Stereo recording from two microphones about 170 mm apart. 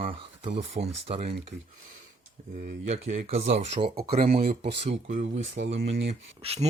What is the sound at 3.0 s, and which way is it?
Speech, 40° right (ahead or behind).